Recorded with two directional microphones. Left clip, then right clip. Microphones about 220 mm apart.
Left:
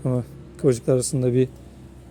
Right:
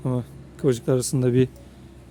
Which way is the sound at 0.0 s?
5° right (ahead or behind).